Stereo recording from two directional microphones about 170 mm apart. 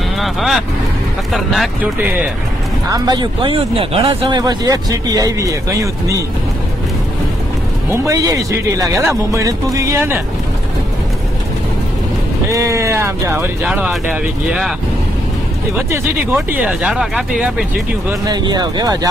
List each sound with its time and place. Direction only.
0.2 s speech: centre (ahead or behind)
2.9 s speech: 25° right (ahead or behind)
7.9 s speech: 20° right (ahead or behind)
12.4 s speech: 20° right (ahead or behind)
15.7 s speech: 10° right (ahead or behind)
18.2 s speech: 25° right (ahead or behind)